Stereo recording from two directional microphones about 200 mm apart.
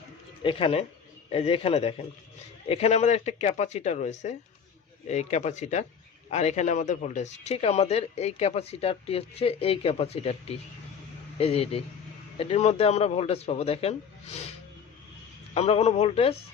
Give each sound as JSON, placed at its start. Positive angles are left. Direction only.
{"t": 0.4, "sound": "a man's voice", "side_deg": 30}
{"t": 15.5, "sound": "speech", "side_deg": 30}